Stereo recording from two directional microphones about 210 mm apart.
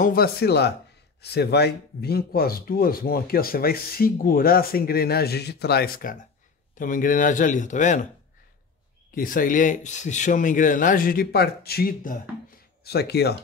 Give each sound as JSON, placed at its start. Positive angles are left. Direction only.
{"t": 0.0, "sound": "speech", "side_deg": 45}
{"t": 9.1, "sound": "speech", "side_deg": 40}